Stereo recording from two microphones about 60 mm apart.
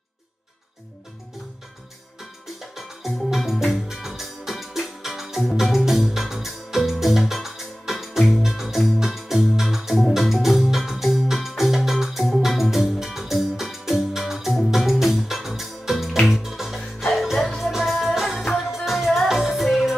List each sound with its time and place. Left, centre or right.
2.7 s music: centre